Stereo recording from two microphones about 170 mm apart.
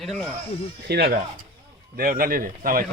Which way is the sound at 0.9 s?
65° right (ahead or behind).